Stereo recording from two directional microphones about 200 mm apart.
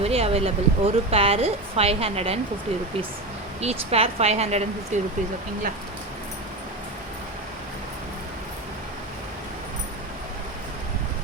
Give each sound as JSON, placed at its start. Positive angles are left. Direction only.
{"t": 0.0, "sound": "a woman's voice", "side_deg": -30}
{"t": 3.6, "sound": "speech", "side_deg": -30}